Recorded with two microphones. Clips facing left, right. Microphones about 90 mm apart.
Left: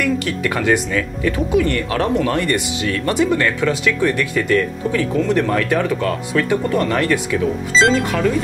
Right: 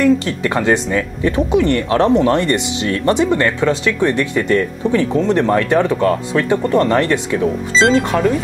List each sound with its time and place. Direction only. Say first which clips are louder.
0.0 s speech: right 5 dB; 25° right (ahead or behind)